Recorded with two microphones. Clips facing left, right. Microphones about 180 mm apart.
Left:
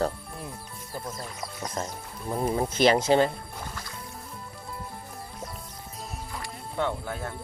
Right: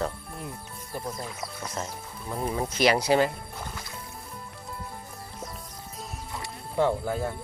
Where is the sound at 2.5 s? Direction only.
30° left (ahead or behind).